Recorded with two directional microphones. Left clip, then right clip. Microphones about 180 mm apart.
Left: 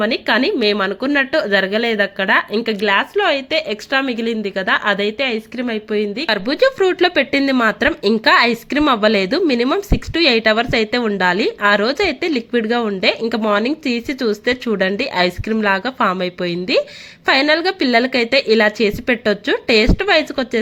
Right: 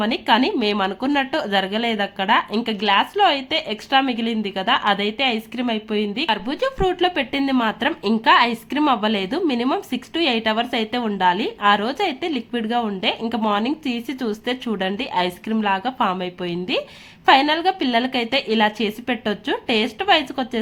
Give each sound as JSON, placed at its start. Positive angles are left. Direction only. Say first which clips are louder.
{"t": 0.0, "sound": "speech", "louder": "left 2 dB", "side_deg": 15}
{"t": 6.2, "sound": "a woman's voice", "louder": "left 9 dB", "side_deg": 25}